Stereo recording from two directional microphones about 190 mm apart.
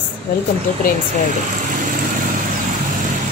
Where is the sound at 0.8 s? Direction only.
45° left (ahead or behind).